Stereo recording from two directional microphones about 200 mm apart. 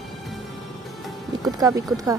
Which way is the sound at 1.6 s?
20° right (ahead or behind).